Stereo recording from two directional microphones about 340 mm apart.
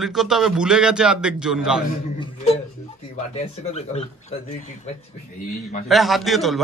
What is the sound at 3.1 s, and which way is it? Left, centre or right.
Speech, centre.